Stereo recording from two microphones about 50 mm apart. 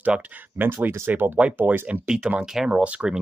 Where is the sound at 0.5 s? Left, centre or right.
Right.